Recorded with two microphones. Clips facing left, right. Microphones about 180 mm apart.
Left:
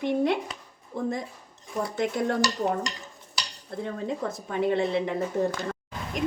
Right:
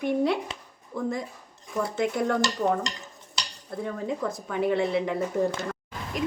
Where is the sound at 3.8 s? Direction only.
20° left (ahead or behind).